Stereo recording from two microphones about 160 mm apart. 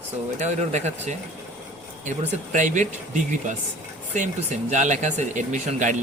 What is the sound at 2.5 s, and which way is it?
Speech, 50° right (ahead or behind).